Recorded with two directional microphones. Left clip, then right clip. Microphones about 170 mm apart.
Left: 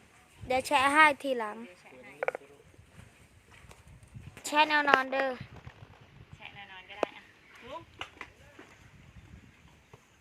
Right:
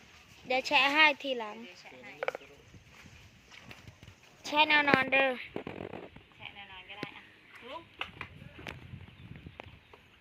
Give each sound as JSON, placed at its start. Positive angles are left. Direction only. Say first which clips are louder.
{"t": 0.4, "sound": "speech", "louder": "left 1 dB", "side_deg": 15}
{"t": 1.5, "sound": "a woman's voice", "louder": "left 3 dB", "side_deg": 5}
{"t": 4.4, "sound": "a woman's voice", "louder": "even", "side_deg": 5}
{"t": 6.4, "sound": "a sound", "louder": "even", "side_deg": 5}